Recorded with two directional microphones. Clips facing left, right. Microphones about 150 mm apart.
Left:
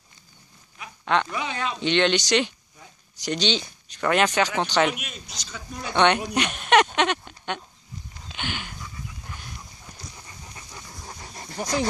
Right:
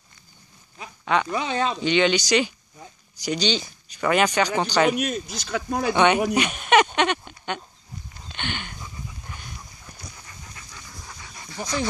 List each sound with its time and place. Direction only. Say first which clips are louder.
1.0 s speech: even; 5° right (ahead or behind)
1.3 s speech: right 5 dB; 30° right (ahead or behind)
1.8 s speech: left 1 dB; centre (ahead or behind)
4.9 s speech: right 13 dB; 40° right (ahead or behind)
5.3 s speech: right 12 dB; 60° right (ahead or behind)
5.9 s speech: right 1 dB; 5° right (ahead or behind)
8.3 s a sound: right 1 dB; 5° left (ahead or behind)
10.1 s dog: left 1 dB; 20° left (ahead or behind); by 11.9 s 40° left (ahead or behind)